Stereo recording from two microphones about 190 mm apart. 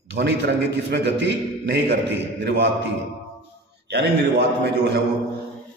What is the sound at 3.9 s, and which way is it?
A man's voice, 65° right (ahead or behind).